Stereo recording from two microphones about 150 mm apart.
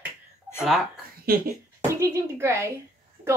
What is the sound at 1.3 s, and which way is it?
Speech, 90° right.